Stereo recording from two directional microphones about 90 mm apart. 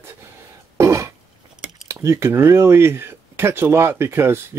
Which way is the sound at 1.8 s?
30° right (ahead or behind).